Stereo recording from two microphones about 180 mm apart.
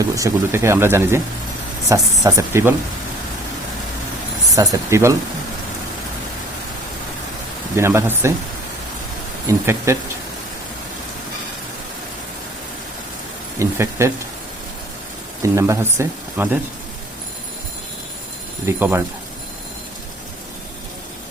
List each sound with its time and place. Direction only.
0.0 s speech: 15° right (ahead or behind)
4.5 s speech: 20° right (ahead or behind)
7.8 s speech: 15° right (ahead or behind)
9.5 s speech: 15° right (ahead or behind)
13.6 s speech: 15° right (ahead or behind)
15.5 s speech: 15° right (ahead or behind)
18.8 s speech: 10° right (ahead or behind)